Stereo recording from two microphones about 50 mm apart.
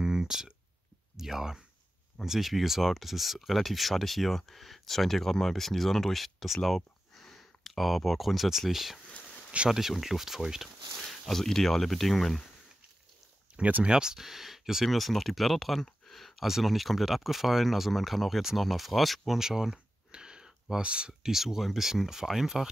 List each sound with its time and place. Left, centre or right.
0.0 s a sound: centre
1.1 s speech: centre
13.6 s speech: right
13.8 s speech: centre
21.3 s speech: centre